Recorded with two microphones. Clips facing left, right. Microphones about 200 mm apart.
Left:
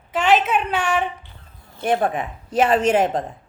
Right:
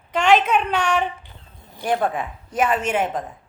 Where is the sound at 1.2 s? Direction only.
15° right (ahead or behind).